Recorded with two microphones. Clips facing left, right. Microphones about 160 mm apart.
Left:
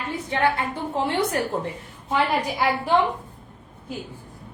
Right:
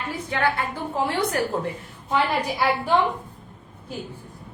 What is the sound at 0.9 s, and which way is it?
Speech, 25° left (ahead or behind).